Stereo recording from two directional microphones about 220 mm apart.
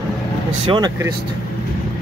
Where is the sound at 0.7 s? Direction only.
20° right (ahead or behind).